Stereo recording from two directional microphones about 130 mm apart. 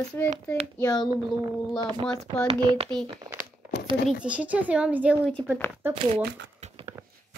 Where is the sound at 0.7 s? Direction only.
30° left (ahead or behind).